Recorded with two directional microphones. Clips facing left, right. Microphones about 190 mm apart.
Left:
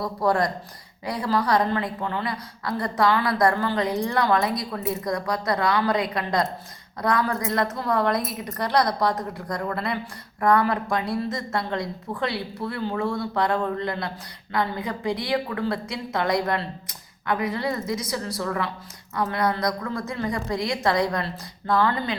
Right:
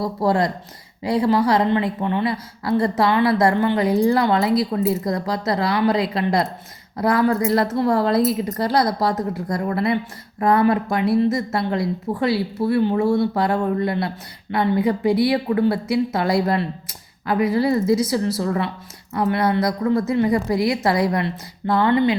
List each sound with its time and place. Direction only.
0.0 s a woman's voice: 25° right (ahead or behind)